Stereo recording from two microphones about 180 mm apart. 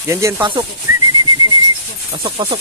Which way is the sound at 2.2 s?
30° right (ahead or behind).